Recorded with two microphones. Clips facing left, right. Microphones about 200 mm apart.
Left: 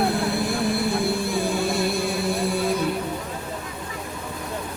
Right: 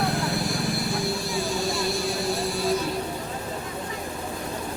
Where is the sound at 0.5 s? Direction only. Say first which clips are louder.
Left 4 dB; 55° left (ahead or behind).